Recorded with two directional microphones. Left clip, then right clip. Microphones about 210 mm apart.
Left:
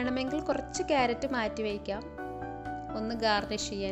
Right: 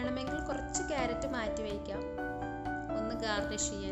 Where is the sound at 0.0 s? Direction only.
30° left (ahead or behind).